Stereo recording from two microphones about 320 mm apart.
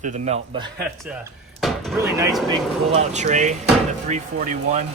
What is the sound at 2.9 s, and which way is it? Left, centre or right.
Speech, right.